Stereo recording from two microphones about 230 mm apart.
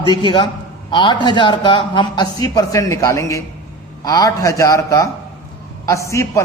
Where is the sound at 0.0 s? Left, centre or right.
Centre.